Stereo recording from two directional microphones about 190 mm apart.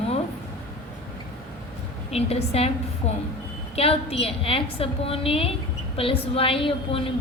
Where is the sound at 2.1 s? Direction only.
30° left (ahead or behind).